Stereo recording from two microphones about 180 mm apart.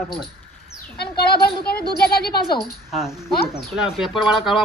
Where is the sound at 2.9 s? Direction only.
Centre (ahead or behind).